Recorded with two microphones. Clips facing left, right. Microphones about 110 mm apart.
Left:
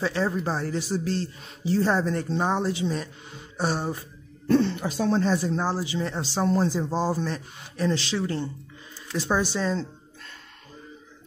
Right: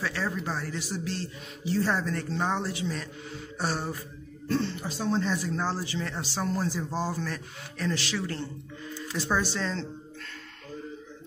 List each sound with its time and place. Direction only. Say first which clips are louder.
0.0 s speech: left 6 dB; 25° left (ahead or behind)
2.0 s speech: left 5 dB; 20° left (ahead or behind)
4.5 s speech: left 7 dB; 65° left (ahead or behind)
5.2 s speech: left 6 dB; 30° left (ahead or behind)
5.6 s speech: left 4 dB; 15° left (ahead or behind)